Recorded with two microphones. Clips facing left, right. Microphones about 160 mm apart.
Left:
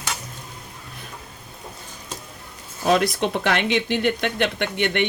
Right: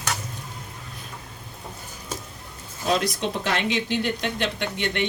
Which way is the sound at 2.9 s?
60° left (ahead or behind).